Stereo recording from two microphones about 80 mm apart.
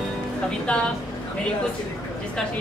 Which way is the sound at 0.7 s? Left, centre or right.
Centre.